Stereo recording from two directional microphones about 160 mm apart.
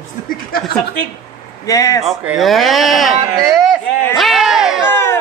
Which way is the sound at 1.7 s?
20° left (ahead or behind).